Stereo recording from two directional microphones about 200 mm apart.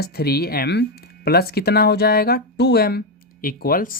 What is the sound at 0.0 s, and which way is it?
Speech, 50° left (ahead or behind).